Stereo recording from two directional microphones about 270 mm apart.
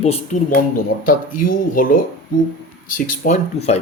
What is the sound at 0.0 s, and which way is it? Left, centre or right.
Speech, left.